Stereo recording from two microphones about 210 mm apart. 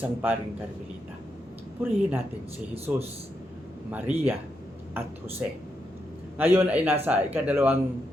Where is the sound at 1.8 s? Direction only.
10° right (ahead or behind).